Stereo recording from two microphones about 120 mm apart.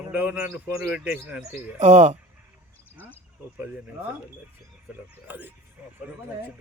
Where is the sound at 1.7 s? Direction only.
70° right (ahead or behind).